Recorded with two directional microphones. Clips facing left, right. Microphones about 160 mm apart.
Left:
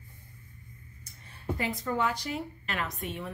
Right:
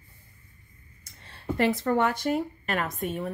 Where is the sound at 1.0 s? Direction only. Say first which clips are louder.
Left 1 dB; 85° right.